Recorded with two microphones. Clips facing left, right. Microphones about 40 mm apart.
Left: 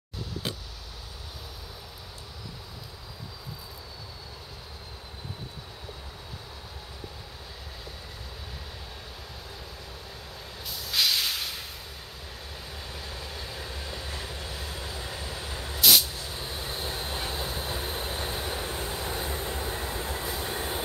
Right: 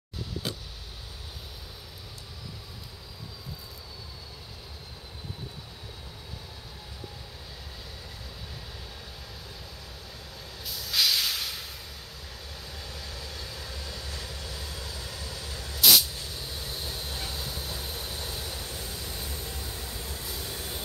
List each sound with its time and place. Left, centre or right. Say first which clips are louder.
10.6 s hiss: even; centre
12.7 s vehicle: left 2 dB; centre
15.8 s vehicle: even; centre
16.3 s vehicle: left 3 dB; left